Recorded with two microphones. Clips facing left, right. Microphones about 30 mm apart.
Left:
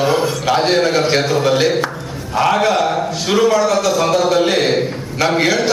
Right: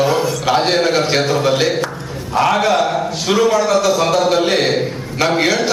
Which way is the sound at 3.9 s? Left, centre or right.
Right.